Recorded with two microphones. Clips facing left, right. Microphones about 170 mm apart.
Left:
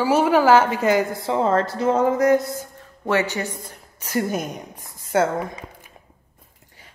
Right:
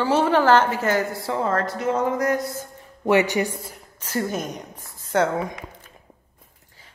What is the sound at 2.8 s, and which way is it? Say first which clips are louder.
Music: right 3 dB; 15° right (ahead or behind).